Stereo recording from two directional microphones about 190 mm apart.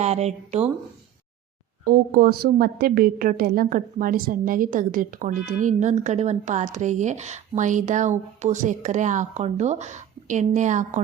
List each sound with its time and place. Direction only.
0.0 s a woman's voice: 35° right (ahead or behind)
1.8 s a woman's voice: 50° right (ahead or behind)